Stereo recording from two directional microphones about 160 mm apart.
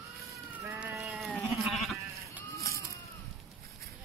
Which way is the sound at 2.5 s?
70° right (ahead or behind).